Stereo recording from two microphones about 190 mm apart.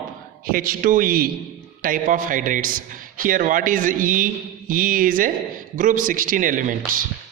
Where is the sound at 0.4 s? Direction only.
50° right (ahead or behind).